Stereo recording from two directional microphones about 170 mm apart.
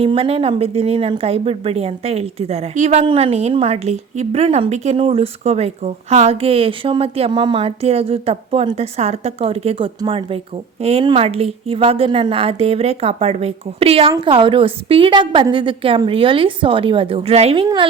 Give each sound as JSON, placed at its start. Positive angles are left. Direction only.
{"t": 0.0, "sound": "a woman's voice", "side_deg": -35}